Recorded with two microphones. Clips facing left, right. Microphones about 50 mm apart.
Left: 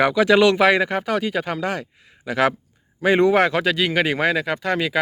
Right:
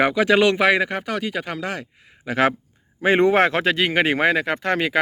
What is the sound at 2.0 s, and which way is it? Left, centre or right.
Speech, right.